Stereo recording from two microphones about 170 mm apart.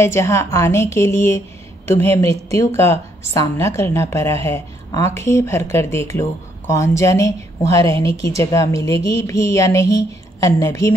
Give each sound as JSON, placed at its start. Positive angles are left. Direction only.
{"t": 0.0, "sound": "a woman's voice", "side_deg": 15}